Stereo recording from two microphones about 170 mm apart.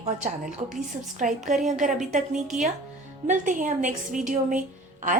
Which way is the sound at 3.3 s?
50° right (ahead or behind).